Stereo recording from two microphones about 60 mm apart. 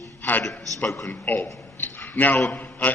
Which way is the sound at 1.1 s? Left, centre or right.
Left.